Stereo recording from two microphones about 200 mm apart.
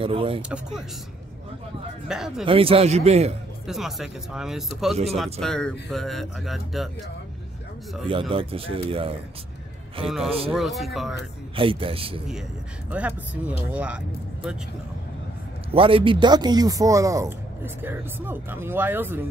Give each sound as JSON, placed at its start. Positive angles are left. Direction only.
{"t": 0.0, "sound": "speech", "side_deg": -25}
{"t": 0.4, "sound": "speech", "side_deg": -5}
{"t": 2.0, "sound": "speech", "side_deg": -5}
{"t": 2.4, "sound": "a man's voice", "side_deg": -30}
{"t": 3.6, "sound": "speech", "side_deg": 0}
{"t": 8.1, "sound": "speech", "side_deg": -25}
{"t": 10.0, "sound": "speech", "side_deg": 0}
{"t": 11.5, "sound": "speech", "side_deg": -25}
{"t": 12.9, "sound": "speech", "side_deg": -5}
{"t": 15.7, "sound": "speech", "side_deg": -25}